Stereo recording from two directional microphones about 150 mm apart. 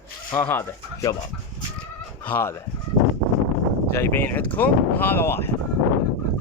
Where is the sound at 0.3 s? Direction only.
15° left (ahead or behind).